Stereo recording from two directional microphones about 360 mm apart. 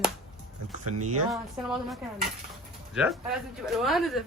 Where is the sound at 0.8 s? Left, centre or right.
Right.